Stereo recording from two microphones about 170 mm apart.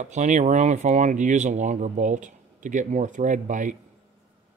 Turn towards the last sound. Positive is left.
turn(degrees=-50)  # may be behind; listen again after turning